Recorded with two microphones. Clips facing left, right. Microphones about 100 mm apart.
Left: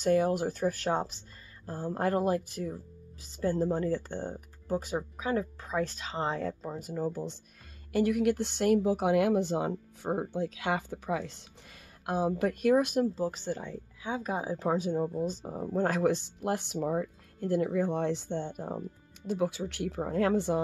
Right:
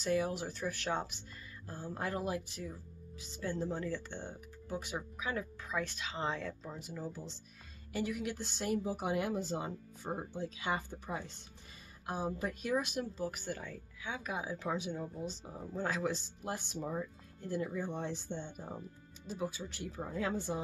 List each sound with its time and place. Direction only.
0.0 s speech: 45° left (ahead or behind)
1.7 s speech: 50° left (ahead or behind)
7.9 s speech: 60° left (ahead or behind); by 11.4 s 90° left
12.1 s speech: 70° left (ahead or behind); by 13.1 s 50° left (ahead or behind)
13.1 s speech: 30° left (ahead or behind)
15.0 s speech: 50° left (ahead or behind)